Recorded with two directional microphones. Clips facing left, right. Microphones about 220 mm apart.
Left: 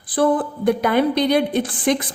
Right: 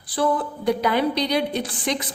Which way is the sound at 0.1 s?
50° left (ahead or behind).